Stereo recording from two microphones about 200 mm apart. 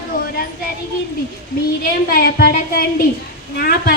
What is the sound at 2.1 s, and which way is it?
A woman's voice, 50° left (ahead or behind).